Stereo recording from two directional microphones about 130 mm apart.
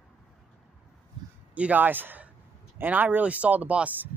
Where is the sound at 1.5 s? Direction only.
10° right (ahead or behind).